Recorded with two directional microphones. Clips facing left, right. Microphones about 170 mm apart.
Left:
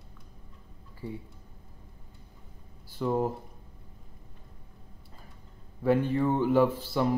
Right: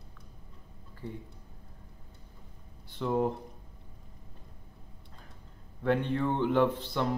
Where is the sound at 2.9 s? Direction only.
5° left (ahead or behind).